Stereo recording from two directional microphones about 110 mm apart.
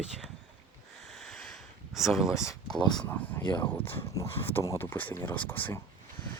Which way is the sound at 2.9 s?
15° left (ahead or behind).